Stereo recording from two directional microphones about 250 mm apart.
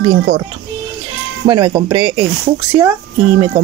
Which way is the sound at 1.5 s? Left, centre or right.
Centre.